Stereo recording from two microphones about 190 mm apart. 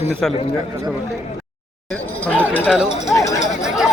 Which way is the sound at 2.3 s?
10° left (ahead or behind).